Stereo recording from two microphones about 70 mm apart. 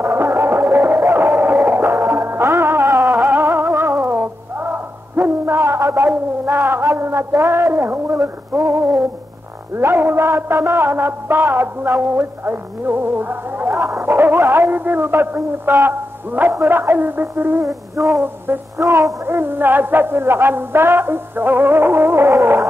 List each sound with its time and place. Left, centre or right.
0.0 s music: right
2.9 s music: right
6.9 s a sound: right
7.3 s music: right
13.7 s a sound: right
14.0 s music: right
18.0 s music: right
19.2 s music: right